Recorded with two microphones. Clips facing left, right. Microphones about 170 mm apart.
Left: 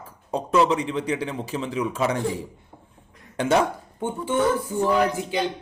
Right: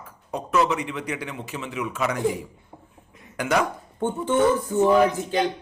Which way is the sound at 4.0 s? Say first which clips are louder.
Right 3 dB; 10° left (ahead or behind).